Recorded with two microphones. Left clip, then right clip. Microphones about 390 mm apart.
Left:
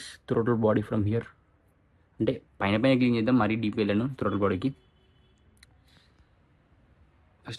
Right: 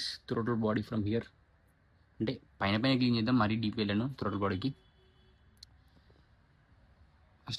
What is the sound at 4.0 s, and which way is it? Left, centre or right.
Speech, left.